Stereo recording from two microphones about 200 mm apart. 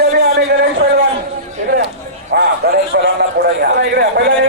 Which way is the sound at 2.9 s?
60° right (ahead or behind).